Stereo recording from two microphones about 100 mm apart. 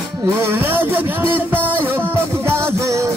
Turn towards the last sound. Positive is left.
turn(degrees=-30)  # may be behind; listen again after turning